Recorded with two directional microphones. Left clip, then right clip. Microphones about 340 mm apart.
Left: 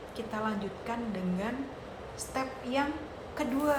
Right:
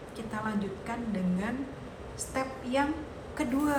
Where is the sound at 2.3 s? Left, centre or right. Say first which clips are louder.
Right 2 dB; centre.